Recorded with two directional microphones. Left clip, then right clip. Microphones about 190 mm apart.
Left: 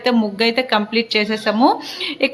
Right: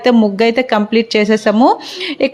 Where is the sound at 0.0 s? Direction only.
35° right (ahead or behind).